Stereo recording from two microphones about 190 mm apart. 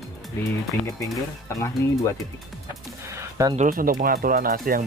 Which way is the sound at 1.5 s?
15° left (ahead or behind).